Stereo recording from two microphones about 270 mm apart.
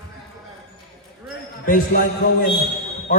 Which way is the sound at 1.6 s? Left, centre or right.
Left.